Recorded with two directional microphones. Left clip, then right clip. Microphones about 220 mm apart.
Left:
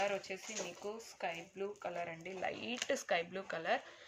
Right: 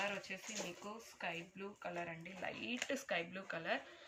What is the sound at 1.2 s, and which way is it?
Speech, 50° left (ahead or behind).